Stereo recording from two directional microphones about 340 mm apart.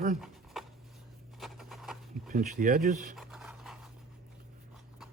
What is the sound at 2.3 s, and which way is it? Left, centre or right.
Speech, right.